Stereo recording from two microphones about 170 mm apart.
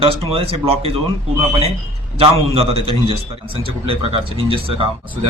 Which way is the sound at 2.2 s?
35° right (ahead or behind).